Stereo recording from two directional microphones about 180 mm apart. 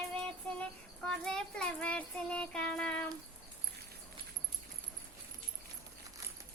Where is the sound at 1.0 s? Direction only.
5° left (ahead or behind).